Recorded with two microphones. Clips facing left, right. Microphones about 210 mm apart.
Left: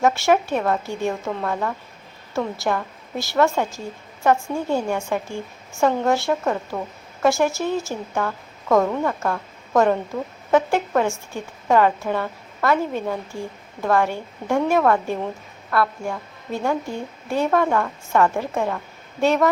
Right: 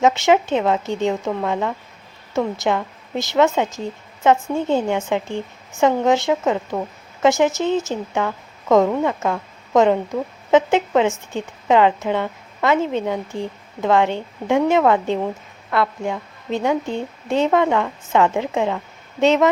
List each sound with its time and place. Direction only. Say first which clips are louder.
0.0 s a woman's voice: right 2 dB; 20° right (ahead or behind)